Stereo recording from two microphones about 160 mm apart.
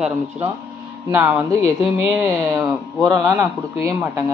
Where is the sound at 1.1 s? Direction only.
15° right (ahead or behind).